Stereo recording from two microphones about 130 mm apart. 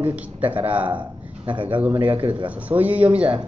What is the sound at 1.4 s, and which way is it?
Speech, 40° right (ahead or behind).